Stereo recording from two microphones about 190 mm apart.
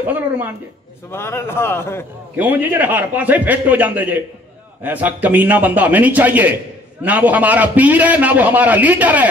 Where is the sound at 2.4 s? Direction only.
10° right (ahead or behind).